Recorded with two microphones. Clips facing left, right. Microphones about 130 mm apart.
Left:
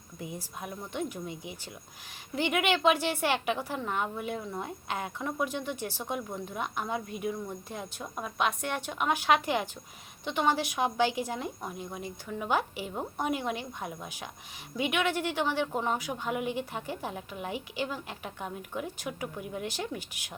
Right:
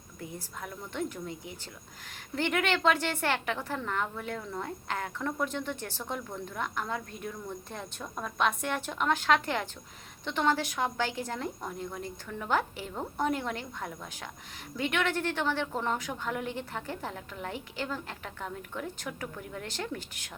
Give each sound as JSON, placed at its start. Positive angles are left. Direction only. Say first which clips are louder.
{"t": 0.2, "sound": "a woman's voice", "louder": "left 1 dB", "side_deg": 15}